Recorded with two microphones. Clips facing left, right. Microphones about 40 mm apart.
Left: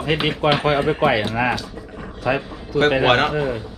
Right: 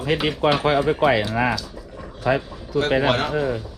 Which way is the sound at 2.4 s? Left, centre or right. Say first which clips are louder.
Left 3 dB; left.